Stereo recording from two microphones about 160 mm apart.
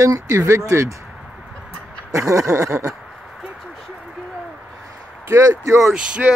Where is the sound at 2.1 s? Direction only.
20° right (ahead or behind).